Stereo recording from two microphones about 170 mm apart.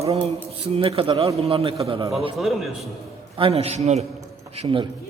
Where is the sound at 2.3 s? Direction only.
Centre (ahead or behind).